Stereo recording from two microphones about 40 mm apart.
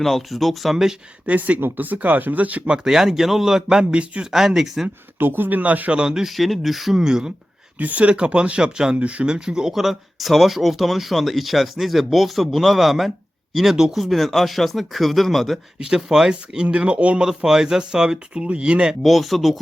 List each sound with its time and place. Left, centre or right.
0.0 s speech: centre
1.3 s speech: right
2.6 s a man's voice: centre
5.2 s speech: right
5.9 s a man's voice: centre
6.3 s speech: centre
6.9 s a man's voice: centre
7.8 s a man's voice: right; by 13.9 s centre
13.9 s speech: centre
15.8 s a man's voice: centre
16.7 s speech: right
17.2 s speech: centre
19.0 s speech: centre